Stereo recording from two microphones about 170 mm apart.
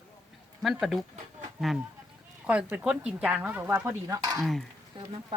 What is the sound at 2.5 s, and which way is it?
Speech, 10° right (ahead or behind).